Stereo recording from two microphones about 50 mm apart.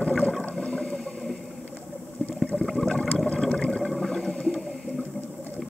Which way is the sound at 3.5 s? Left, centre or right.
Centre.